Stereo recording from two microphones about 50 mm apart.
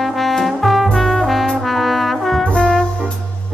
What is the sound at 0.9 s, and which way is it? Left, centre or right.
Brass instrument, centre.